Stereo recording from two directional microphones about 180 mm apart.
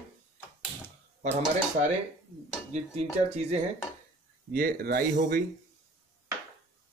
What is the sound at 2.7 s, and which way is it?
Speech, 40° right (ahead or behind).